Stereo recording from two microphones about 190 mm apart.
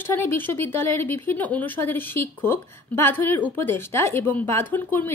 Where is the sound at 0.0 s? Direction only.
10° left (ahead or behind).